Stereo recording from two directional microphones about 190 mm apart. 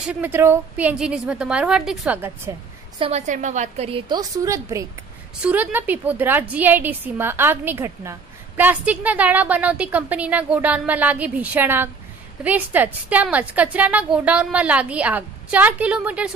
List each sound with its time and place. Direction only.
0.0 s a woman's voice: 5° right (ahead or behind)
3.0 s a woman's voice: 35° right (ahead or behind); by 16.3 s 5° right (ahead or behind)